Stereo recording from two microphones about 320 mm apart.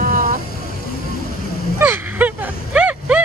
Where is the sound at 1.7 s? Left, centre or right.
Centre.